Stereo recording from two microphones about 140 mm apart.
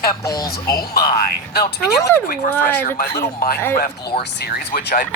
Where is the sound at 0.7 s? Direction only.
90° left.